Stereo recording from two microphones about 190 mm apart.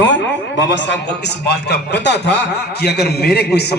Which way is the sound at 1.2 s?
60° left (ahead or behind).